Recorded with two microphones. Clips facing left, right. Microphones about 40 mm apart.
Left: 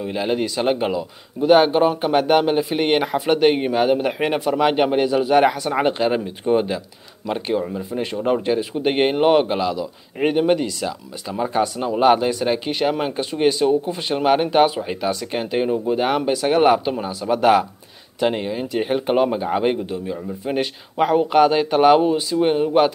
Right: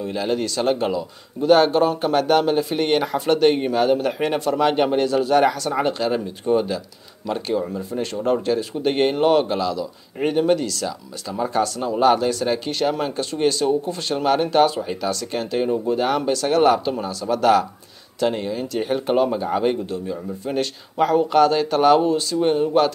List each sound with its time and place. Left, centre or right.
0.0 s speech: centre